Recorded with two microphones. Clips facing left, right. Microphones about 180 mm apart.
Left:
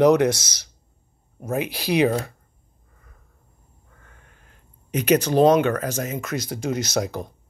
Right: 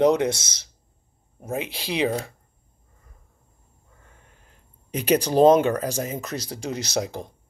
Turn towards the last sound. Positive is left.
turn(degrees=-30)  # may be behind; listen again after turning